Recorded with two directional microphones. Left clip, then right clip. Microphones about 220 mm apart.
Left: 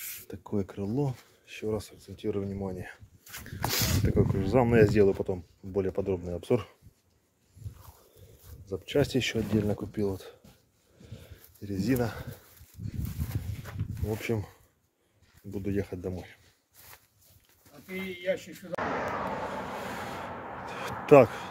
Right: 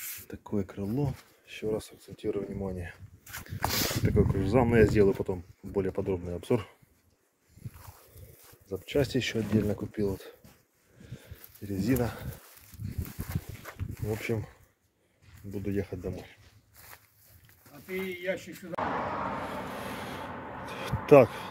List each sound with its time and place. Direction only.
0.3 s speech: 5° left (ahead or behind)
8.6 s speech: 10° left (ahead or behind)
11.6 s speech: centre (ahead or behind)
14.0 s speech: 10° left (ahead or behind)
15.5 s speech: 15° left (ahead or behind)
18.2 s speech: 40° left (ahead or behind)
18.8 s vehicle: 40° left (ahead or behind)
19.8 s a sound: 10° left (ahead or behind)